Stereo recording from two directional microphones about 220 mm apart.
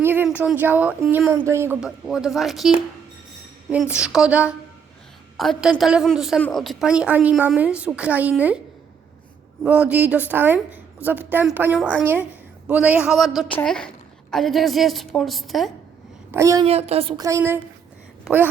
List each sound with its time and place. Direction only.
0.0 s a woman's voice: 10° right (ahead or behind)
9.6 s a woman's voice: 5° right (ahead or behind)
16.3 s speech: 15° right (ahead or behind)
16.6 s a woman's voice: 30° right (ahead or behind); by 17.6 s 15° right (ahead or behind)